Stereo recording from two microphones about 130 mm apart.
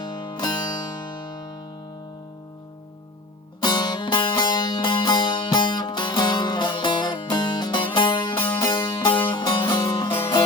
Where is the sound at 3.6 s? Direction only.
35° left (ahead or behind).